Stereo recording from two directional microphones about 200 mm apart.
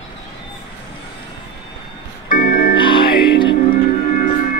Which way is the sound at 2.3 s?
45° left (ahead or behind).